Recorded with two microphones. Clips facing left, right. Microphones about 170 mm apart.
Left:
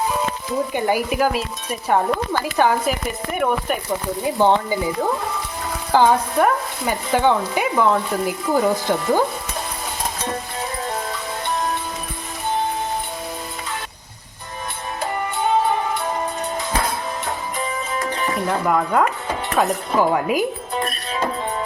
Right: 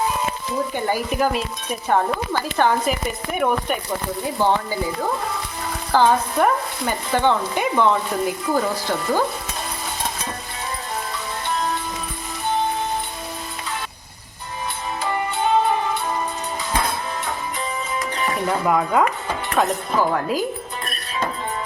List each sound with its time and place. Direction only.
0.7 s speech: 10° left (ahead or behind)
4.4 s speech: 20° left (ahead or behind)
5.9 s speech: 15° left (ahead or behind)
8.5 s speech: 15° left (ahead or behind)
18.4 s speech: centre (ahead or behind)
20.0 s speech: 15° left (ahead or behind)